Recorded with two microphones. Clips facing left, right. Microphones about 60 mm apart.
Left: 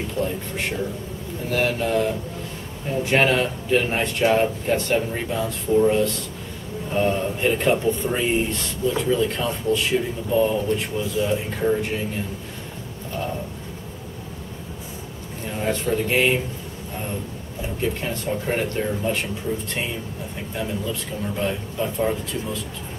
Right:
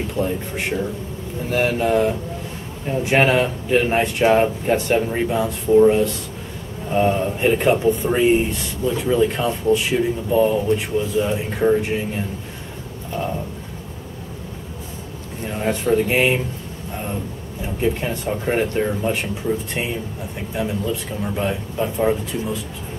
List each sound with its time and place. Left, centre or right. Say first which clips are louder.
0.2 s speech: right 3 dB; centre
15.4 s speech: right 3 dB; centre
17.8 s speech: right 4 dB; centre
20.5 s speech: right 4 dB; centre